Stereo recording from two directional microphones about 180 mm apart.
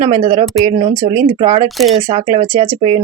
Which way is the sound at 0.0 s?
45° right (ahead or behind).